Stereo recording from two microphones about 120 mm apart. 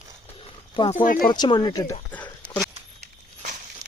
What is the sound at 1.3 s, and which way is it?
Speech, 35° left (ahead or behind).